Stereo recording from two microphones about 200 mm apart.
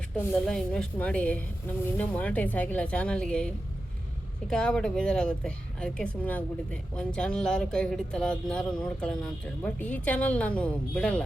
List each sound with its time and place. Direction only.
0.2 s a woman's voice: 5° left (ahead or behind)